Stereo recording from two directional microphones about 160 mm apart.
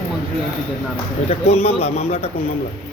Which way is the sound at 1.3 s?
40° left (ahead or behind).